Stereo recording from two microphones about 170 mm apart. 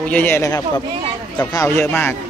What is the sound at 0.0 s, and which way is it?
Speech, 10° left (ahead or behind).